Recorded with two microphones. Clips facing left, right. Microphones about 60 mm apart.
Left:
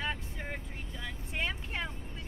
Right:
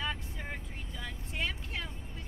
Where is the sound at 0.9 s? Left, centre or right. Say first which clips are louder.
Left 1 dB; left.